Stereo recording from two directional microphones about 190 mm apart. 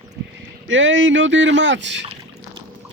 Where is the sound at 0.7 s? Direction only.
85° right; by 2.0 s 70° right (ahead or behind).